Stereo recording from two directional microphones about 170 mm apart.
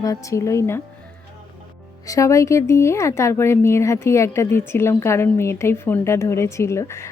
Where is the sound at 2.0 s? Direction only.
20° left (ahead or behind).